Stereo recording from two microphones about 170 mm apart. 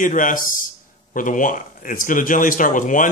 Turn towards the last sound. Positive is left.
turn(degrees=50)  # may be behind; listen again after turning